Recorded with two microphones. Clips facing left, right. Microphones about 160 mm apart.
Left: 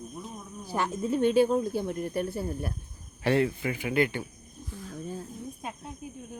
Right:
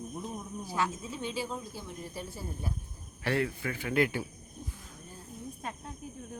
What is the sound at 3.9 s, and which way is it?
Speech, centre (ahead or behind).